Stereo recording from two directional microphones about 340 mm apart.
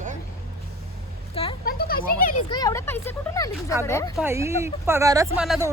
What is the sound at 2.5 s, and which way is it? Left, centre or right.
Speech, centre.